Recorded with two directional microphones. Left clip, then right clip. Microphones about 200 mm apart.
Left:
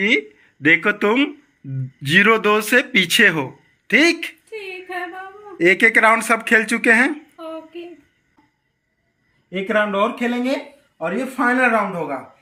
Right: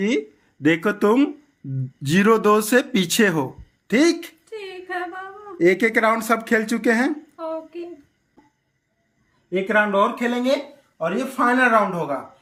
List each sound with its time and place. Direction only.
0.9 s speech: 20° right (ahead or behind)
7.1 s a sound: 5° left (ahead or behind)
9.5 s speech: centre (ahead or behind)